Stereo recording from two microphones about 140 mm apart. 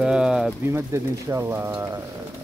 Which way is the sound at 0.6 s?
20° right (ahead or behind).